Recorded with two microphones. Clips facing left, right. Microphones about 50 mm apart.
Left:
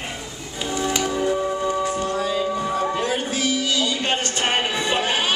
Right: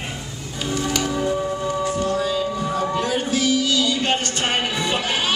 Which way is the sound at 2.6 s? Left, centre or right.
Centre.